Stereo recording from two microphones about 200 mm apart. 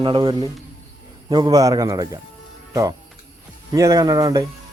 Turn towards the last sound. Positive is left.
turn(degrees=-15)  # may be behind; listen again after turning